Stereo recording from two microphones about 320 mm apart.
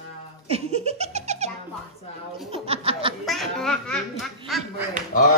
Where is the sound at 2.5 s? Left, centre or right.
Centre.